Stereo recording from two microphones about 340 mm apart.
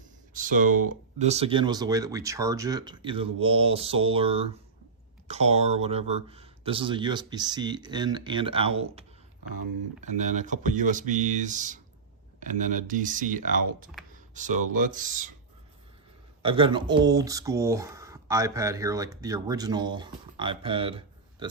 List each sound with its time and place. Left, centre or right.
0.3 s speech: right
14.1 s computer keyboard: right
14.8 s speech: right
16.4 s speech: centre